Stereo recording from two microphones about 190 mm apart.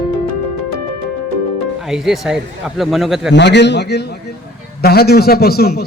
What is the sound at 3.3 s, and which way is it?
A man's voice, 65° left (ahead or behind).